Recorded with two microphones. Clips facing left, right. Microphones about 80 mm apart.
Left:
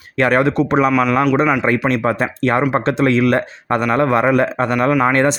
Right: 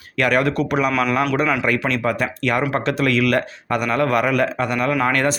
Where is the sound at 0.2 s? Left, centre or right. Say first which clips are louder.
Left 4 dB; left.